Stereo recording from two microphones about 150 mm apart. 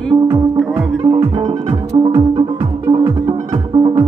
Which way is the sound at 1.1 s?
30° right (ahead or behind).